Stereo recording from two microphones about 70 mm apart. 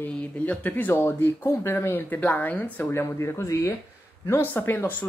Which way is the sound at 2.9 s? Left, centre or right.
Left.